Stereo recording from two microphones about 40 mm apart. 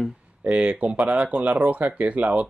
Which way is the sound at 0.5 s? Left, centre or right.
Right.